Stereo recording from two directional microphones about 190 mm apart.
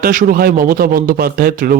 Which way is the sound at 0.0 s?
45° right (ahead or behind).